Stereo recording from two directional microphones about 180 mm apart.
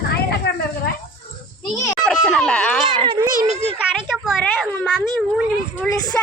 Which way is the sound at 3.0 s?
30° right (ahead or behind).